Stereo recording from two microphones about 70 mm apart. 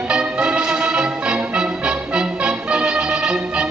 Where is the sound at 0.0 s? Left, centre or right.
Centre.